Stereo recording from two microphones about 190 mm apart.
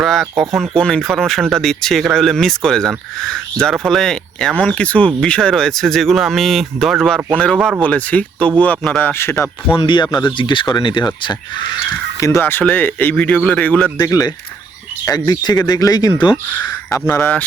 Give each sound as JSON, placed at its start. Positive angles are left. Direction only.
{"t": 0.0, "sound": "speech", "side_deg": 0}
{"t": 9.7, "sound": "speech", "side_deg": 25}